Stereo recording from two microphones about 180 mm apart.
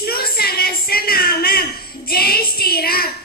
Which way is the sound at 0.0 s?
60° left (ahead or behind).